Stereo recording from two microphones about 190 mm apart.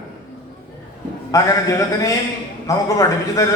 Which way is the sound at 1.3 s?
15° left (ahead or behind).